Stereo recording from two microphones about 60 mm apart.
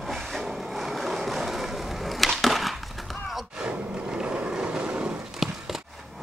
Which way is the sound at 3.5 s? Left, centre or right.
Centre.